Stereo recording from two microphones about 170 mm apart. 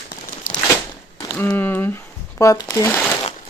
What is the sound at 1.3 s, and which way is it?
Speech, 10° left (ahead or behind).